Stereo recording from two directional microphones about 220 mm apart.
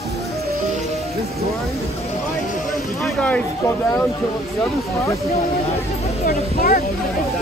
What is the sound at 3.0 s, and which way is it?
Speech, 5° left (ahead or behind).